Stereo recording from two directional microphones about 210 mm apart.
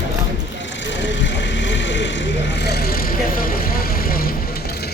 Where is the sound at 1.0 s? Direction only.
60° left (ahead or behind).